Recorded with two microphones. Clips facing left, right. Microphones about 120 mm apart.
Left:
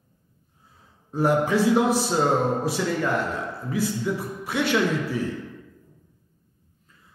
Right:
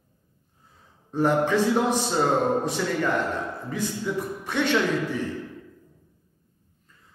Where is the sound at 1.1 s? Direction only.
10° left (ahead or behind).